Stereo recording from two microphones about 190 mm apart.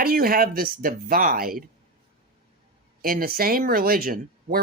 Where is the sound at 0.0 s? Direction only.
50° right (ahead or behind).